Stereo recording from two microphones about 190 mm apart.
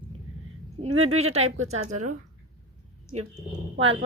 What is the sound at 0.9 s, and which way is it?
Speech, 90° right.